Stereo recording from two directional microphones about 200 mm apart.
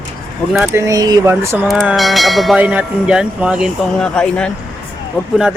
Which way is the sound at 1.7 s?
Centre (ahead or behind).